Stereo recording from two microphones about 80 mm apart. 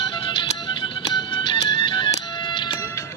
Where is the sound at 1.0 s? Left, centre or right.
Left.